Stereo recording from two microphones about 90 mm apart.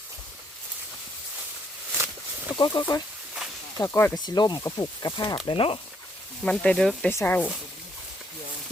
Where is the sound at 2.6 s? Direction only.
60° left (ahead or behind).